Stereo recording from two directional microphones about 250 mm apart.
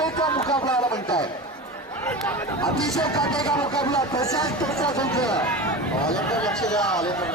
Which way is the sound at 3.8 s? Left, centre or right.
Centre.